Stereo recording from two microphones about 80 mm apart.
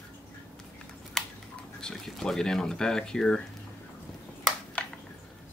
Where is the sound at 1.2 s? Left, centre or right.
Centre.